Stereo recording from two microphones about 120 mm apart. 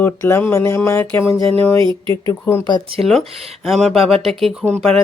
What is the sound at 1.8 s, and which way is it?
Speech, 45° right (ahead or behind).